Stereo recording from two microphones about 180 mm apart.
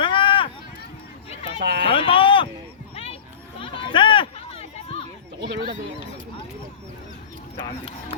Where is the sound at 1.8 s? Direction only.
30° left (ahead or behind).